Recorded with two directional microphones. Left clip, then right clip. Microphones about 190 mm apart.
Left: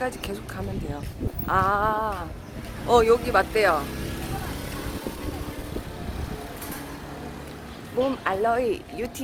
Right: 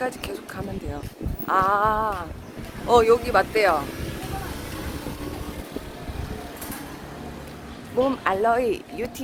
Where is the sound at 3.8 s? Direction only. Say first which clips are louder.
Even; 60° left (ahead or behind).